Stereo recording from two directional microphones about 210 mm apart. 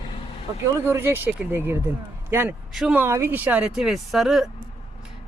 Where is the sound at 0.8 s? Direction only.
10° right (ahead or behind).